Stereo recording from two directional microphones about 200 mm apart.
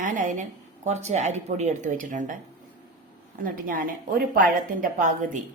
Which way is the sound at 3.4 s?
45° right (ahead or behind).